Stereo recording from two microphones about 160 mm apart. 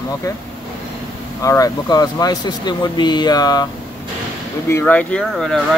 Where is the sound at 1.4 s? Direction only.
20° left (ahead or behind).